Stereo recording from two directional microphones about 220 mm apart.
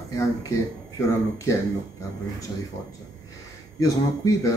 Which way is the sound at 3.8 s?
15° left (ahead or behind).